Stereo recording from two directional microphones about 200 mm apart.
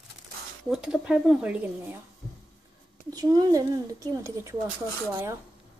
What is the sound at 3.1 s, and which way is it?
Speech, 20° right (ahead or behind).